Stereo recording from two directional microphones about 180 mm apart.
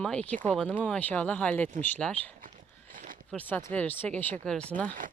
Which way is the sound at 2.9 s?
50° right (ahead or behind).